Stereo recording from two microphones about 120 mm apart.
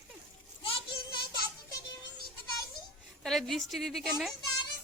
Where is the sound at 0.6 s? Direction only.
45° left (ahead or behind).